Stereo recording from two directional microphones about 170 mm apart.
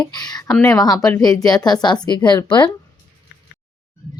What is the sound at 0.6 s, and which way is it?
Speech, 20° left (ahead or behind).